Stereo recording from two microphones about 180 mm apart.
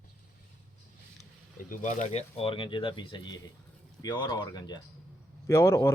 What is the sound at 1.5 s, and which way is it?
A man's voice, 45° left (ahead or behind).